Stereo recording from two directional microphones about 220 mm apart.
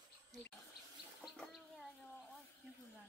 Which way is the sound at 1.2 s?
Centre (ahead or behind).